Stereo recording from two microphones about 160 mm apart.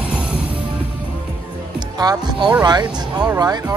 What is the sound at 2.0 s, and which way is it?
Speech, 25° right (ahead or behind).